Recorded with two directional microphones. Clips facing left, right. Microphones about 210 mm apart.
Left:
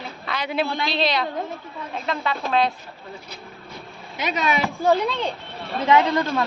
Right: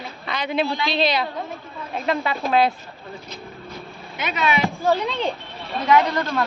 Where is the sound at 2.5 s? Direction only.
5° right (ahead or behind).